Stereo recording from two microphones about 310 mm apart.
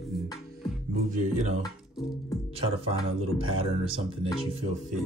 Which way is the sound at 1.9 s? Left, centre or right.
Centre.